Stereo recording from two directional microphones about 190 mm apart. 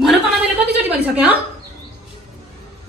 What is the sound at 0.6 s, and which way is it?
Speech, 10° right (ahead or behind).